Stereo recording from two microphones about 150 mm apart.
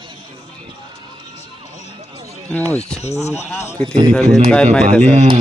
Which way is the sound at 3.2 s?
45° left (ahead or behind).